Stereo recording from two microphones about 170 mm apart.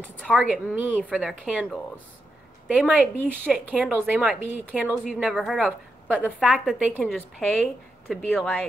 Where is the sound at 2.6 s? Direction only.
10° right (ahead or behind).